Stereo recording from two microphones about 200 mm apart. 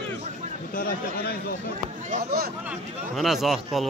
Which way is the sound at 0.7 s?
45° left (ahead or behind).